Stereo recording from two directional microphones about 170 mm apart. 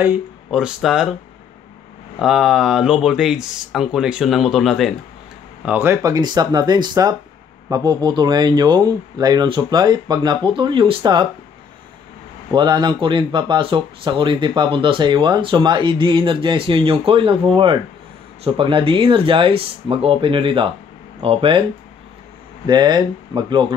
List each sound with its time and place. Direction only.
0.0 s speech: 10° right (ahead or behind)
2.1 s speech: centre (ahead or behind)
5.7 s speech: 15° right (ahead or behind)
12.5 s speech: 25° right (ahead or behind)
18.4 s speech: 30° right (ahead or behind)
22.7 s speech: 25° right (ahead or behind)